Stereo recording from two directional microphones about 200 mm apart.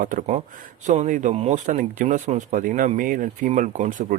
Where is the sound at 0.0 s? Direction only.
45° right (ahead or behind).